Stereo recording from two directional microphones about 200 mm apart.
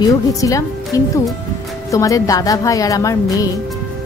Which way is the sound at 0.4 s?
15° left (ahead or behind).